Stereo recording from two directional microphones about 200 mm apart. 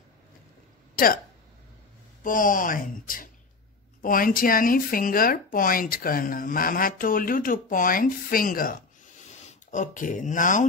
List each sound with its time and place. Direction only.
2.2 s speech: 45° left (ahead or behind)